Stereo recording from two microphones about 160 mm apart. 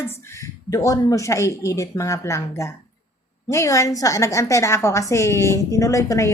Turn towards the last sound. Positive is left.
turn(degrees=20)  # may be behind; listen again after turning